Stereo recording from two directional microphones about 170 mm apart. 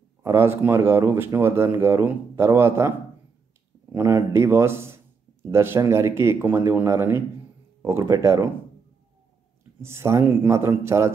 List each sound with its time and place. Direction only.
0.2 s speech: 15° right (ahead or behind)
3.9 s speech: 15° right (ahead or behind)
9.8 s speech: 15° right (ahead or behind)